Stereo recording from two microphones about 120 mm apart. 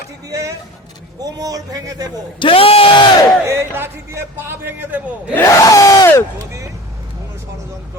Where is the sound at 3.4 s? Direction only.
20° right (ahead or behind).